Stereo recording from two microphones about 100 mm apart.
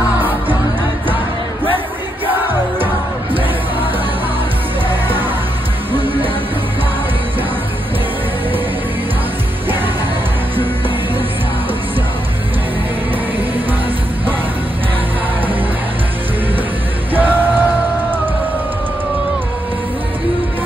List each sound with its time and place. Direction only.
4.8 s music: 20° right (ahead or behind)
17.1 s music: 20° right (ahead or behind)